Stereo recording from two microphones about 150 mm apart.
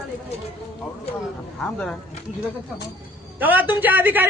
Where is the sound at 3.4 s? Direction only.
10° right (ahead or behind).